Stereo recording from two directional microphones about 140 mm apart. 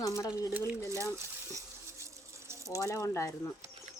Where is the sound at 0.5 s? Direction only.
15° right (ahead or behind).